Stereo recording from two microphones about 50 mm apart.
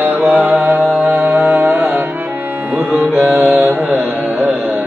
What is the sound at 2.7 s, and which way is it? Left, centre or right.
Music, right.